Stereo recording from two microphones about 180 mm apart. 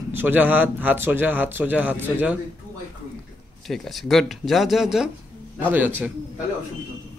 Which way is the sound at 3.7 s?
Centre (ahead or behind).